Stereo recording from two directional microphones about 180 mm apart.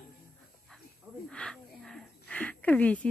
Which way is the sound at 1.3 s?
5° left (ahead or behind).